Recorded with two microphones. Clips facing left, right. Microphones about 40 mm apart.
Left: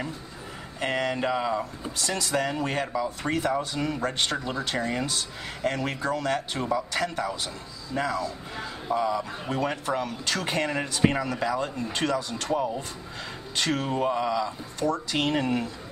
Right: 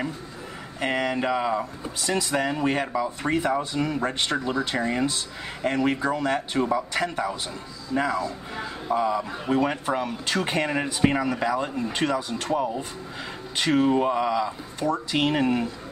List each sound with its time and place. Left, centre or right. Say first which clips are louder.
0.7 s speech: right 2 dB; centre
3.3 s speech: right 3 dB; centre
6.3 s speech: right 3 dB; centre
9.2 s speech: right 5 dB; centre